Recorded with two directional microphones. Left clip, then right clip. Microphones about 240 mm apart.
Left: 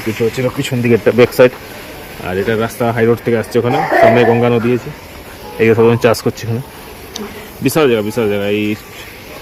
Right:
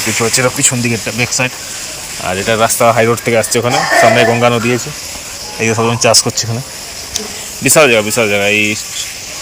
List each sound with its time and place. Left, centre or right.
0.3 s speech: centre
0.8 s speech: centre
2.2 s speech: centre
7.6 s speech: centre